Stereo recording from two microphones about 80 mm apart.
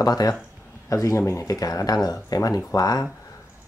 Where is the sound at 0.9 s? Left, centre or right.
Left.